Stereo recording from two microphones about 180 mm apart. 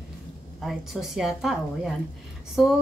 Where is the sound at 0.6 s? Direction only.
Centre (ahead or behind).